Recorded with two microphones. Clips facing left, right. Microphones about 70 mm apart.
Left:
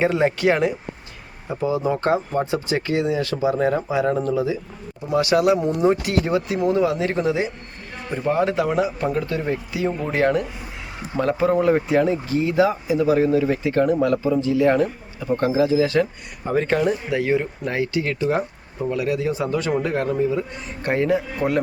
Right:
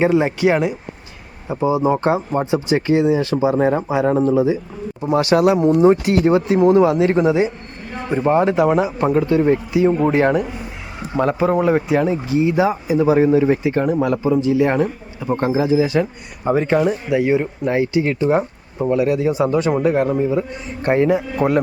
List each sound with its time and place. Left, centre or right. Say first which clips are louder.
0.0 s speech: right 3 dB; centre
1.5 s speech: right 5 dB; centre